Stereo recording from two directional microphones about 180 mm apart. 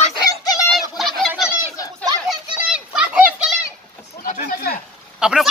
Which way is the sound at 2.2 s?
5° right (ahead or behind).